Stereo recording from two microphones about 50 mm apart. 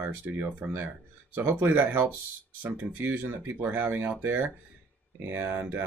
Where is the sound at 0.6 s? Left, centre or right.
Right.